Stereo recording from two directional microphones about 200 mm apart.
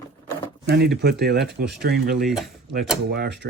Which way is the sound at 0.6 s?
55° right (ahead or behind).